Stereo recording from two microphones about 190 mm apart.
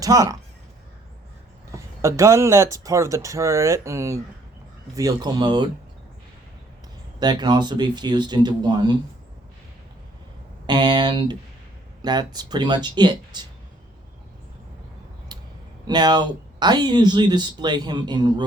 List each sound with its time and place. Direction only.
0.0 s speech: 20° right (ahead or behind)
1.7 s speech: 15° right (ahead or behind)
7.2 s speech: 20° right (ahead or behind)
10.7 s speech: 25° right (ahead or behind)
15.3 s a sound: 20° right (ahead or behind)
15.9 s speech: 20° right (ahead or behind)